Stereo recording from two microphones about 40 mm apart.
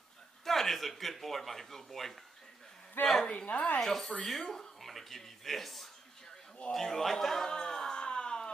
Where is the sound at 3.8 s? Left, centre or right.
Centre.